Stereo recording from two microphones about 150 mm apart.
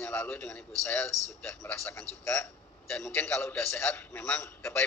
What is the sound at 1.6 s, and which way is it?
A man's voice, 20° left (ahead or behind).